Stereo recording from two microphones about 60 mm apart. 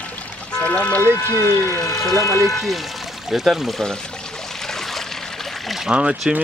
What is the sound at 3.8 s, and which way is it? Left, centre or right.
Trickle, centre.